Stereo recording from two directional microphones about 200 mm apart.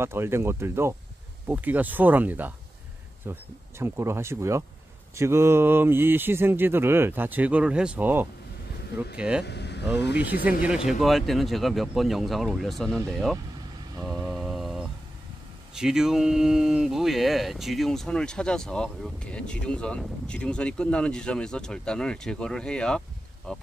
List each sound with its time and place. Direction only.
0.0 s speech: 10° right (ahead or behind)
9.4 s vehicle: 55° left (ahead or behind)
10.9 s speech: centre (ahead or behind)
14.0 s mantra: centre (ahead or behind)
15.7 s speech: 5° right (ahead or behind)